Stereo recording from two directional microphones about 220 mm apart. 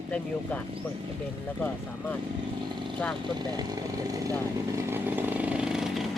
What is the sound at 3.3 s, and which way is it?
Speech, 20° right (ahead or behind).